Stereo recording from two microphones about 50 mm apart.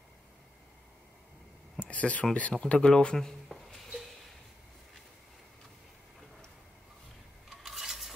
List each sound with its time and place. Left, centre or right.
1.8 s speech: left
7.4 s rub: centre